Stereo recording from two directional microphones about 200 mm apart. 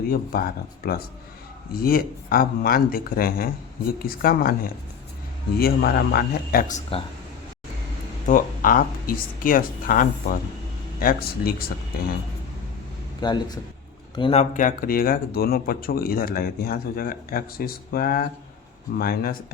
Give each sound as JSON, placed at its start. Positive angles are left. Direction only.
{"t": 0.1, "sound": "speech", "side_deg": 45}
{"t": 8.3, "sound": "speech", "side_deg": 45}
{"t": 13.2, "sound": "a man's voice", "side_deg": 20}
{"t": 14.5, "sound": "speech", "side_deg": 45}